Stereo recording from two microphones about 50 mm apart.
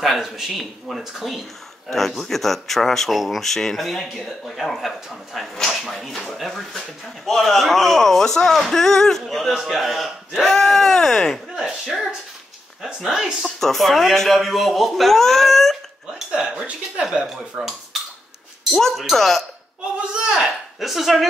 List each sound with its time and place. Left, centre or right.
0.0 s speech: centre
11.5 s speech: centre
13.6 s speech: centre
16.1 s dishes: centre
16.9 s speech: centre
18.7 s speech: centre
20.2 s a sound: centre
20.8 s speech: centre